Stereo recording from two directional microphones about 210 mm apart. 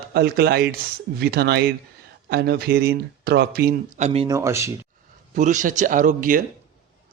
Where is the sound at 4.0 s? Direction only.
30° right (ahead or behind).